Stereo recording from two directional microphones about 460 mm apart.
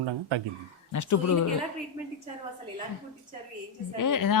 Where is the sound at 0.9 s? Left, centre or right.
Left.